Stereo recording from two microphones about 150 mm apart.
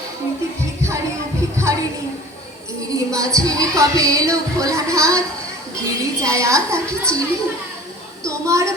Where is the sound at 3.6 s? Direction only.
20° right (ahead or behind).